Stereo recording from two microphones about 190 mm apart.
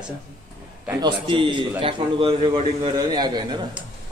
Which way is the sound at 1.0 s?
25° right (ahead or behind).